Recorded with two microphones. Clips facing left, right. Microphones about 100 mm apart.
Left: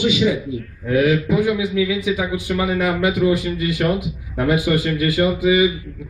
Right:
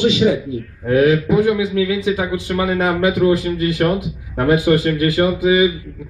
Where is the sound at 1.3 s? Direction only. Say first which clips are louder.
Right 3 dB; 50° right (ahead or behind).